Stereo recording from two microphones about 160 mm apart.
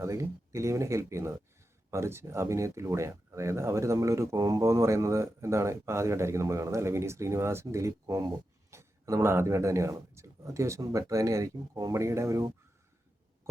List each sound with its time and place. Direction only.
0.0 s speech: 20° right (ahead or behind)